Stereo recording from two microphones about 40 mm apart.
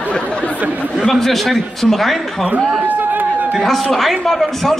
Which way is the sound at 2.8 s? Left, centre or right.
Right.